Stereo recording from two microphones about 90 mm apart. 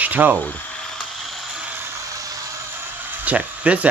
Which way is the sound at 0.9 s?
Centre (ahead or behind).